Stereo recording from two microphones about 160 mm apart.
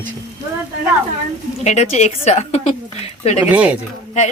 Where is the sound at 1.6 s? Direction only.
45° left (ahead or behind).